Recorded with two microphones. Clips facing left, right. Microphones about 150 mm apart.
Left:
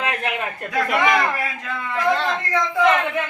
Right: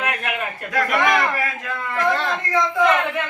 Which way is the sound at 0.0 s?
25° left (ahead or behind).